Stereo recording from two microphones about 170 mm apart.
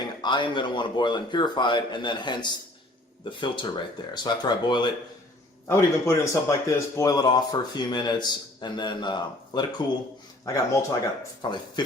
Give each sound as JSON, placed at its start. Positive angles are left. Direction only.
{"t": 0.2, "sound": "a man's voice", "side_deg": 25}
{"t": 5.6, "sound": "a man's voice", "side_deg": 15}